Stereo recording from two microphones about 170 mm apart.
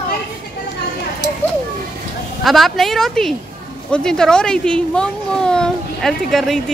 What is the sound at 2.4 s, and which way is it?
Speech, centre (ahead or behind).